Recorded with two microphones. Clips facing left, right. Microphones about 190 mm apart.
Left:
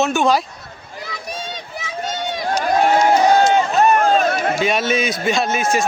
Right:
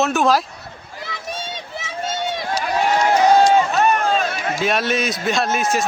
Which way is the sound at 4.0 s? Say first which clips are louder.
Left 5 dB; 55° left (ahead or behind).